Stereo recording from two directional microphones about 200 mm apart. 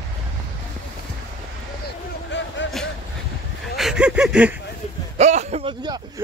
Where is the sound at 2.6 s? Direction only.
65° left (ahead or behind).